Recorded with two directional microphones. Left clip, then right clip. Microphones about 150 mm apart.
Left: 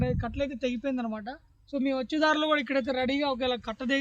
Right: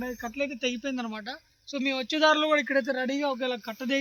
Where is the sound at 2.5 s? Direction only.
75° left (ahead or behind).